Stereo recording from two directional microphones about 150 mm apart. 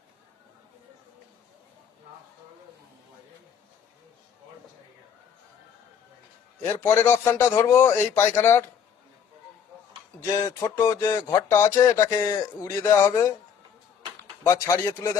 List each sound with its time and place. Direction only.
6.7 s a man's voice: 15° left (ahead or behind)
10.3 s speech: 20° left (ahead or behind)
14.4 s speech: 20° left (ahead or behind)